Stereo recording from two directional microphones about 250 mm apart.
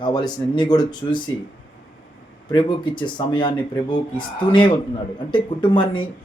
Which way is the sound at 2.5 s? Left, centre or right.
Centre.